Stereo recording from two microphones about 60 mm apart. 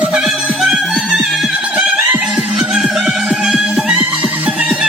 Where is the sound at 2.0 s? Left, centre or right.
Right.